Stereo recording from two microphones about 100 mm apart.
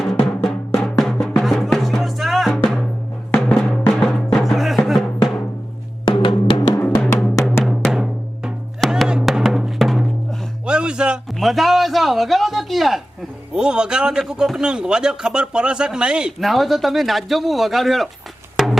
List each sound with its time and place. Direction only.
0.0 s drum: centre (ahead or behind)
0.7 s music: 5° left (ahead or behind)
2.5 s drum: 5° left (ahead or behind)
3.3 s music: 10° left (ahead or behind)
6.1 s music: 55° left (ahead or behind)
6.8 s music: 5° left (ahead or behind)
7.6 s drum: 5° right (ahead or behind)
8.9 s music: 5° right (ahead or behind)
11.3 s a sound: centre (ahead or behind)
13.5 s a man's voice: 10° right (ahead or behind)
18.5 s a sound: centre (ahead or behind)